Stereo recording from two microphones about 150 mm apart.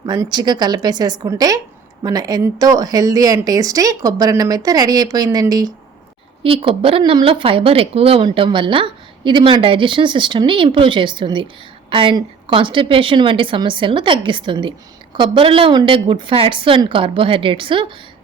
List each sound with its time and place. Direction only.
0.0 s a woman's voice: 25° right (ahead or behind)
6.4 s speech: 35° right (ahead or behind)